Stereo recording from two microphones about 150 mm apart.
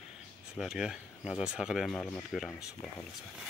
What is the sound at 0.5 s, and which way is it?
Speech, 5° right (ahead or behind).